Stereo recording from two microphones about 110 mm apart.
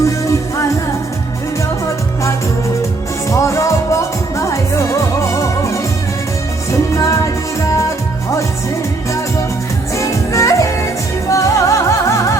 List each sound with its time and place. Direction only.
0.0 s music: 30° left (ahead or behind)
3.2 s music: 30° left (ahead or behind)
9.9 s music: 30° left (ahead or behind)